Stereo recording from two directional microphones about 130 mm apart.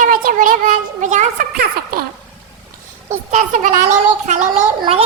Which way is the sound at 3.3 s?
70° right (ahead or behind).